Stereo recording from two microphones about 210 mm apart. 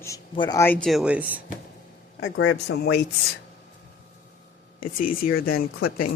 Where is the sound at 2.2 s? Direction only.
65° left (ahead or behind).